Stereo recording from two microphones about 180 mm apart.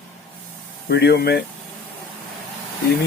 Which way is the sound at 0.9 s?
65° left (ahead or behind).